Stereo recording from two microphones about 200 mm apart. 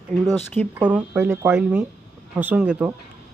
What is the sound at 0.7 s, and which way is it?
Speech, 10° right (ahead or behind).